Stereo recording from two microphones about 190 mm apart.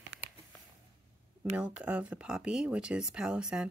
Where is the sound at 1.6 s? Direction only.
5° right (ahead or behind).